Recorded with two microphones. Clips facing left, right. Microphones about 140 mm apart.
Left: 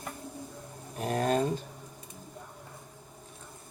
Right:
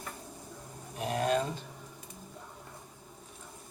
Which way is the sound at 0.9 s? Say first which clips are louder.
Left 2 dB; 40° left (ahead or behind).